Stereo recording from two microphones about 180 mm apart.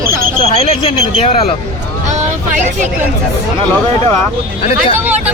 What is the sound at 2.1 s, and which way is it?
Speech, 40° right (ahead or behind).